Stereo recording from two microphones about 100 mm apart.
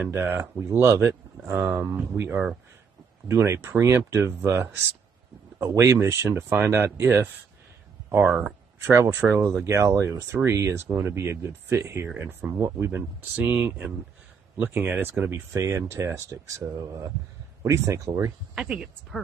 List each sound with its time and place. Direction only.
0.0 s speech: 20° right (ahead or behind)
5.7 s speech: 30° right (ahead or behind)
9.7 s speech: 30° right (ahead or behind)
18.5 s speech: 10° right (ahead or behind)